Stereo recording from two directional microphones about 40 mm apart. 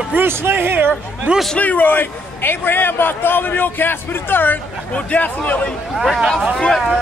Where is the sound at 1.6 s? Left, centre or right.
Left.